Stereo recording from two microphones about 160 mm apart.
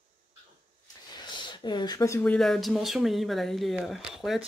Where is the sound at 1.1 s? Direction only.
30° left (ahead or behind).